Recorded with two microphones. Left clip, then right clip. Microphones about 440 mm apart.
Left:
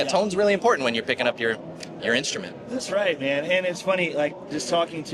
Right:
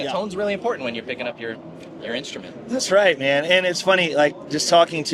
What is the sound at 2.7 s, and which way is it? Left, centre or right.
A man's voice, right.